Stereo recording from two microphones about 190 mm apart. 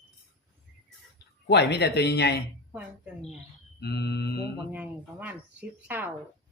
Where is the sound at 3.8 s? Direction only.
60° left (ahead or behind).